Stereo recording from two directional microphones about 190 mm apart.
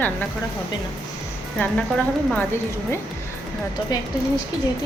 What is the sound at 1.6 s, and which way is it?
Speech, 5° left (ahead or behind).